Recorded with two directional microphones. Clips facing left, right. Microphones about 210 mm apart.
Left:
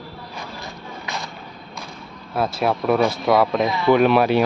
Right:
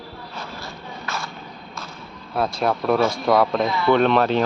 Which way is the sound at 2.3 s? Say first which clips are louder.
Left 1 dB; 5° left (ahead or behind).